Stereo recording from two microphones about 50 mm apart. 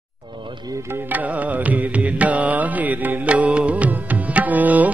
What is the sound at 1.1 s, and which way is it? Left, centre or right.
Music, right.